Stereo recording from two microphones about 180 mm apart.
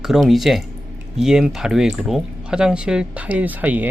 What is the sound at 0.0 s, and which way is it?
Speech, centre (ahead or behind).